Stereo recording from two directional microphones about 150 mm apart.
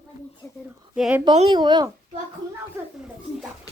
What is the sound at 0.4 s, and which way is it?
Speech, 15° left (ahead or behind).